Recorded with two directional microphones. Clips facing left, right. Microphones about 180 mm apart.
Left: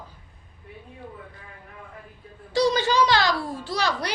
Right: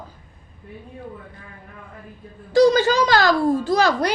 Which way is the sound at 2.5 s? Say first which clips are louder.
Right 6 dB; 45° right (ahead or behind).